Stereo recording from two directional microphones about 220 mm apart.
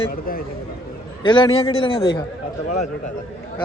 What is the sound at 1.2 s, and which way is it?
Speech, 20° left (ahead or behind).